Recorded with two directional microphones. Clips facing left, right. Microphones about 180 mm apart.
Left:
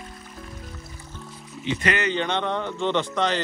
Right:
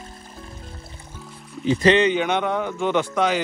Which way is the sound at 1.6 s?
35° right (ahead or behind).